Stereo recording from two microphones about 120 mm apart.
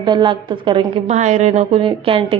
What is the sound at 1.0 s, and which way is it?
Speech, 75° right (ahead or behind).